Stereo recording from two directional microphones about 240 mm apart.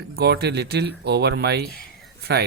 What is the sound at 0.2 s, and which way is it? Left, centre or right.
Speech, right.